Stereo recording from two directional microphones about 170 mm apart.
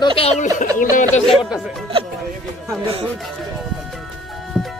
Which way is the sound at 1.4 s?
5° right (ahead or behind).